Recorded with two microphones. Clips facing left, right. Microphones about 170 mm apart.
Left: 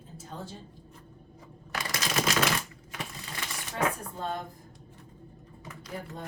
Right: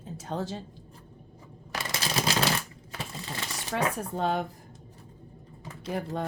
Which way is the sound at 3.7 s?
85° right.